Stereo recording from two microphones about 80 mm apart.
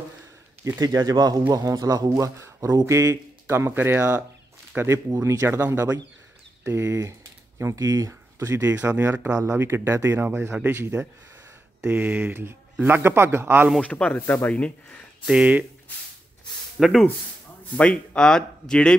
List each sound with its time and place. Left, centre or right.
0.7 s speech: right
4.7 s speech: right
5.5 s speech: right
8.8 s speech: right
9.3 s speech: right
11.8 s speech: centre
13.8 s speech: centre
15.2 s speech: centre
16.8 s speech: centre
17.7 s speech: centre